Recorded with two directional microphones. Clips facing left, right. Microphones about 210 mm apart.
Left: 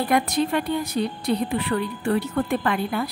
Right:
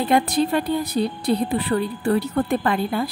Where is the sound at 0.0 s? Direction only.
30° right (ahead or behind).